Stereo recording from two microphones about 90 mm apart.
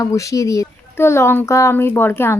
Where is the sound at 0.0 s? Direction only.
35° left (ahead or behind).